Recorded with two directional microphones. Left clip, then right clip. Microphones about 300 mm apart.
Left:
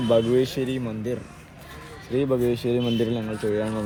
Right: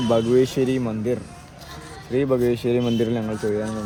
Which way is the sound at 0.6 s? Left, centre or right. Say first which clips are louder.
Right 5 dB; right.